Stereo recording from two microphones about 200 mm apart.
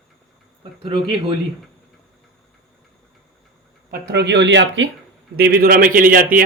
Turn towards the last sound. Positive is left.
turn(degrees=-45)  # may be behind; listen again after turning